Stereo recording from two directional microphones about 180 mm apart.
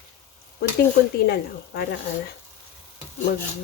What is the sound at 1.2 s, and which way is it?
Speech, 60° left (ahead or behind).